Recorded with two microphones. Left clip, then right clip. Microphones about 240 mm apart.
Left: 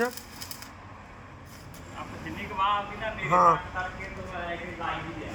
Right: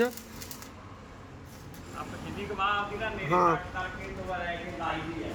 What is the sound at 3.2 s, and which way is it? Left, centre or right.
Speech, centre.